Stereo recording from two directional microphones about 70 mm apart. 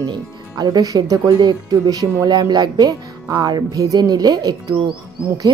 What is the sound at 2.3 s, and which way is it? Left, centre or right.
Speech, right.